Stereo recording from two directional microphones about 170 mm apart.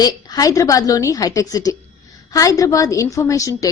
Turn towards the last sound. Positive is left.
turn(degrees=20)  # may be behind; listen again after turning